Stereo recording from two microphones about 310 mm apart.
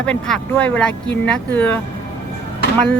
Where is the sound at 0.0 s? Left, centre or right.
Centre.